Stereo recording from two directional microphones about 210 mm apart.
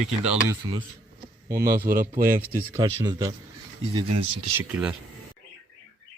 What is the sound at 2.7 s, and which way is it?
Speech, 15° right (ahead or behind).